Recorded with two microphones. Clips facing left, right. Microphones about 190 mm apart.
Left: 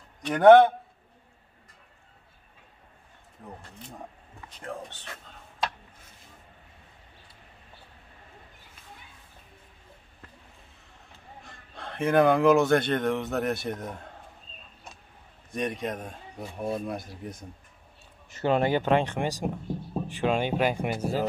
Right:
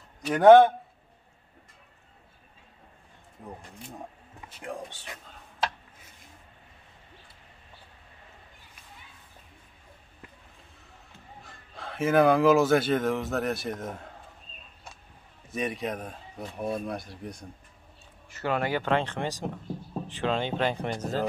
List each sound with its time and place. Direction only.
0.2 s a man's voice: 5° right (ahead or behind)
4.5 s speech: 10° right (ahead or behind)
11.4 s speech: centre (ahead or behind)
15.5 s speech: centre (ahead or behind)
18.3 s speech: 25° left (ahead or behind)